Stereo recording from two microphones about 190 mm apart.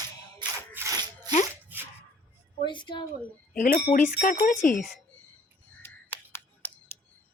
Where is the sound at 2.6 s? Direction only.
25° left (ahead or behind).